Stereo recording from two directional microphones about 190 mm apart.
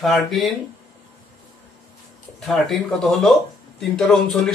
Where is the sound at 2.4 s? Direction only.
Centre (ahead or behind).